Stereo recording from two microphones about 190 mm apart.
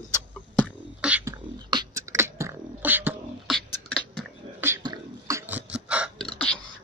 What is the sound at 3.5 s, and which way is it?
Beatboxing, 5° left (ahead or behind).